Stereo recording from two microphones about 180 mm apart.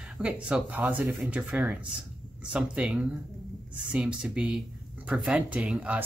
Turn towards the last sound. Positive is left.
turn(degrees=-5)  # may be behind; listen again after turning